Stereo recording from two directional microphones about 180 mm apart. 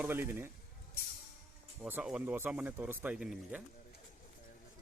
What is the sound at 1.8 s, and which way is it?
Speech, 10° right (ahead or behind).